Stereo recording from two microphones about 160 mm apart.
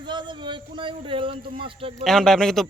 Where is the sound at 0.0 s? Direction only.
30° right (ahead or behind).